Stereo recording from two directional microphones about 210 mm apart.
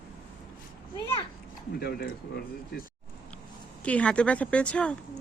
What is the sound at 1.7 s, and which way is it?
Speech, 50° left (ahead or behind).